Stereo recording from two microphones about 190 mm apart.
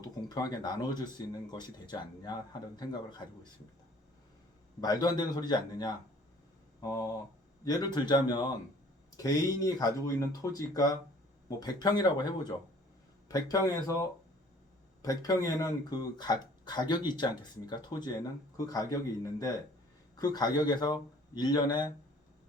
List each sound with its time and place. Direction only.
0.0 s speech: 20° left (ahead or behind)
4.8 s speech: 20° left (ahead or behind)
7.6 s speech: 20° left (ahead or behind)